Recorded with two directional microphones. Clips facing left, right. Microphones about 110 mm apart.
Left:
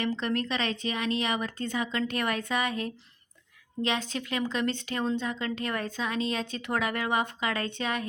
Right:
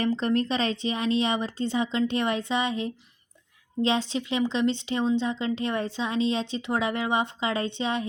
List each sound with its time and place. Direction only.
0.0 s a woman's voice: 35° right (ahead or behind)